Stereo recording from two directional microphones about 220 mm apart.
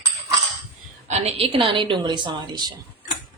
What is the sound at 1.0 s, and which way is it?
A woman's voice, 30° right (ahead or behind).